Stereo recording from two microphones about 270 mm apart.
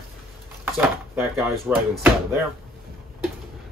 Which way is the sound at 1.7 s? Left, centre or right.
Centre.